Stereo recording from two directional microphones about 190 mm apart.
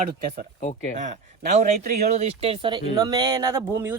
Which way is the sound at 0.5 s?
45° left (ahead or behind).